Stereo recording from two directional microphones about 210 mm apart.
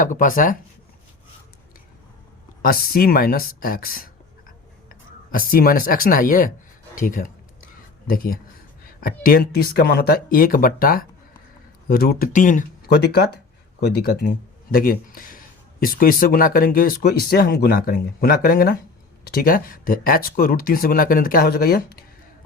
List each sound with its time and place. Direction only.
0.0 s speech: 40° left (ahead or behind)
2.6 s speech: 45° left (ahead or behind)
13.8 s speech: 50° left (ahead or behind)